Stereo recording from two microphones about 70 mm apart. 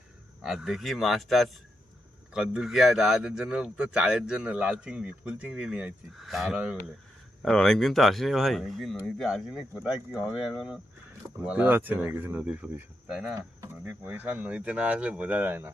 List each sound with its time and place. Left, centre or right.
0.4 s speech: centre
7.4 s speech: centre
11.4 s speech: right
12.4 s speech: centre
14.1 s speech: right